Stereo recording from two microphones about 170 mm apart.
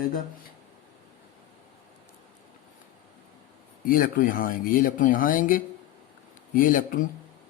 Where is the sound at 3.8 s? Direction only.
55° left (ahead or behind).